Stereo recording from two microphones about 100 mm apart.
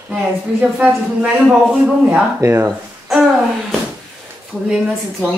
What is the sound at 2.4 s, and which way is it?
Speech, 30° right (ahead or behind).